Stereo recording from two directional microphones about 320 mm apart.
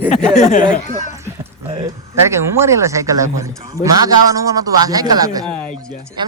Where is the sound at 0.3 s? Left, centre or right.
Left.